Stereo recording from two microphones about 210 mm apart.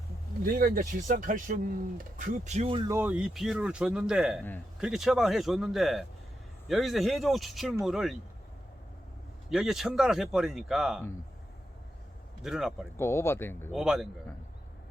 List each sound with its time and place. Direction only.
0.5 s speech: 40° right (ahead or behind); by 2.9 s 25° right (ahead or behind)
2.9 s speech: 10° right (ahead or behind)
9.5 s speech: centre (ahead or behind)
12.4 s speech: centre (ahead or behind)
13.0 s speech: 10° left (ahead or behind)
13.7 s speech: centre (ahead or behind)